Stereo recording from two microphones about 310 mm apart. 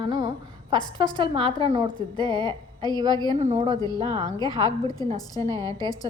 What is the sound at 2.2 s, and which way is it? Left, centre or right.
A woman's voice, centre.